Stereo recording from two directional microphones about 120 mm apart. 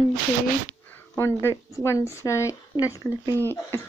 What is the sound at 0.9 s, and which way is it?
Speech, 20° left (ahead or behind).